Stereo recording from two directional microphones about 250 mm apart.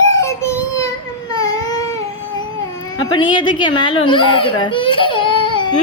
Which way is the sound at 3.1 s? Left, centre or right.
Centre.